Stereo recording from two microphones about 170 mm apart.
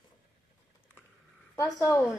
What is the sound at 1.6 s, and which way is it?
Speech, 15° left (ahead or behind).